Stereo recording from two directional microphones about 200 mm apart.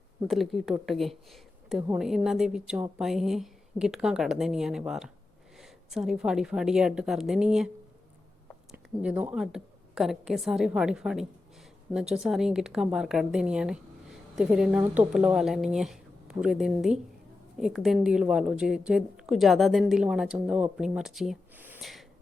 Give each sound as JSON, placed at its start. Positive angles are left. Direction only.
{"t": 0.3, "sound": "a woman's voice", "side_deg": 0}
{"t": 8.7, "sound": "a woman's voice", "side_deg": -5}